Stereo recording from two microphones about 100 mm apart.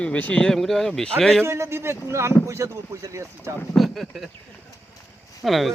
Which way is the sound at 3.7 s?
Centre (ahead or behind).